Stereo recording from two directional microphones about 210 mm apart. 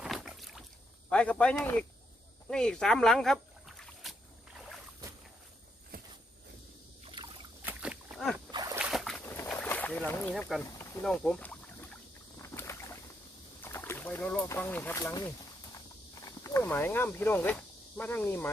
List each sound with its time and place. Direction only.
0.0 s boat: centre (ahead or behind)
1.1 s speech: 5° left (ahead or behind)
2.5 s boat: 5° left (ahead or behind)
5.9 s a sound: 45° right (ahead or behind)
7.0 s boat: 25° right (ahead or behind)
7.6 s a sound: 5° right (ahead or behind)
8.5 s a sound: 15° right (ahead or behind)
8.8 s boat: centre (ahead or behind)
11.0 s rowboat: 5° left (ahead or behind)
13.6 s speech: 10° left (ahead or behind)
16.4 s speech: 10° left (ahead or behind)